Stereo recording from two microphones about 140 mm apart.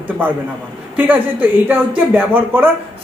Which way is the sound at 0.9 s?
10° right (ahead or behind).